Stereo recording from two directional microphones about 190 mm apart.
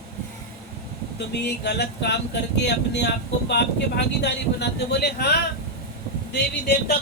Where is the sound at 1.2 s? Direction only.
60° left (ahead or behind).